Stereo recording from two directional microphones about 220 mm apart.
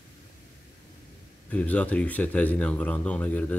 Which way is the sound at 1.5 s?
5° left (ahead or behind).